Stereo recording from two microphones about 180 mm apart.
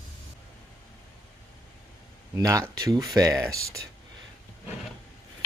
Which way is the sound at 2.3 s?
15° right (ahead or behind).